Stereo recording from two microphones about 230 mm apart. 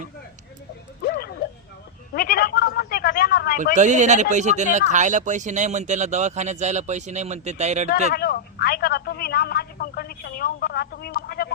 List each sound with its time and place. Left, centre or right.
1.0 s a sound: left
3.8 s speech: right
8.1 s speech: left